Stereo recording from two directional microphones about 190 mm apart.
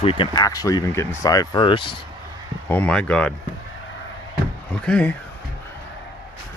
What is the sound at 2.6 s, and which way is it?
Speech, 10° left (ahead or behind).